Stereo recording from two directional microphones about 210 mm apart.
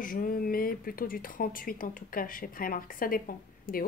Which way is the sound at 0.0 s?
40° left (ahead or behind).